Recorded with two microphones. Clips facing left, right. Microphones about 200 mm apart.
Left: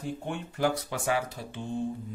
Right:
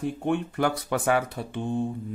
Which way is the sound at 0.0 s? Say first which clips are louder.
Right 8 dB; 60° right (ahead or behind).